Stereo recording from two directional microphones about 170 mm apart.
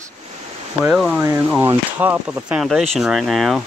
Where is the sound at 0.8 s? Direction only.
Centre (ahead or behind).